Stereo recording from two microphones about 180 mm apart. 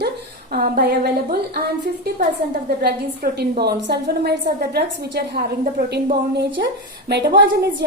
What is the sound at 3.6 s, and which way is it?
A woman's voice, 70° right (ahead or behind).